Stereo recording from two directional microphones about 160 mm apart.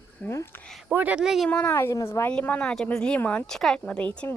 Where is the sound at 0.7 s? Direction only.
5° right (ahead or behind).